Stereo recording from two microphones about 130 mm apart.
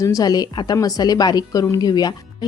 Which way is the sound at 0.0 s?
25° left (ahead or behind).